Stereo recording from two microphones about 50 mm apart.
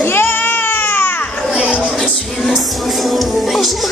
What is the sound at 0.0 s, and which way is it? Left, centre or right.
Baby cry, left.